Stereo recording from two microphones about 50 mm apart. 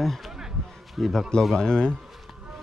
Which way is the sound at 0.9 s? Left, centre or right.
Centre.